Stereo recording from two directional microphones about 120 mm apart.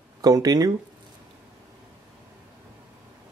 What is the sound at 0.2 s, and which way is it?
Speech, 30° right (ahead or behind).